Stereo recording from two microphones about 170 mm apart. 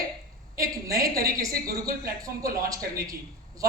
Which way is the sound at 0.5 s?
20° right (ahead or behind).